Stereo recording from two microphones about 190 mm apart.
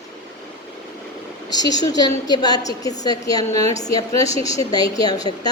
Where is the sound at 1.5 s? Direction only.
20° left (ahead or behind).